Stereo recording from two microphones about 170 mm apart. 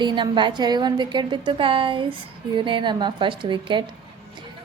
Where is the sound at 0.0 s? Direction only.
25° right (ahead or behind).